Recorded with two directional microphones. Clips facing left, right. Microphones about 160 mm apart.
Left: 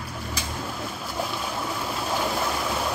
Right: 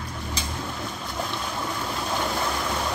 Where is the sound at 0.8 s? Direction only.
5° left (ahead or behind).